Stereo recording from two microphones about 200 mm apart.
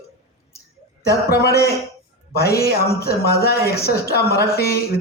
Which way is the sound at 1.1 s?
50° left (ahead or behind).